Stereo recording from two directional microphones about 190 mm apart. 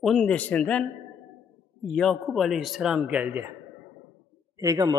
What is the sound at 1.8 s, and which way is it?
Speech, centre (ahead or behind).